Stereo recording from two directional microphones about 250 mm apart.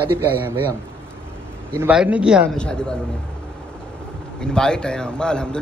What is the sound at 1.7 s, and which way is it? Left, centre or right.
A man's voice, centre.